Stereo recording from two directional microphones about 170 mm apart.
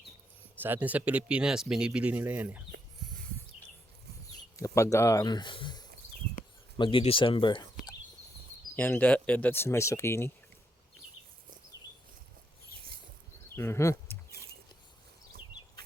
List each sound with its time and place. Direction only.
0.6 s speech: 10° right (ahead or behind)
4.5 s speech: 15° left (ahead or behind)
8.7 s speech: 10° left (ahead or behind)
13.6 s speech: 15° left (ahead or behind)
14.3 s a sound: 65° right (ahead or behind)